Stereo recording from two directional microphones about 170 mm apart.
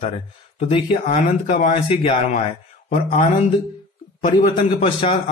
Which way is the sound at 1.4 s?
45° left (ahead or behind).